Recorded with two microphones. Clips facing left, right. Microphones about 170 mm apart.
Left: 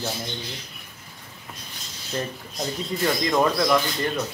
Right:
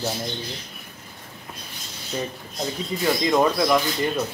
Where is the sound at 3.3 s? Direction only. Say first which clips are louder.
Right 1 dB; 10° right (ahead or behind).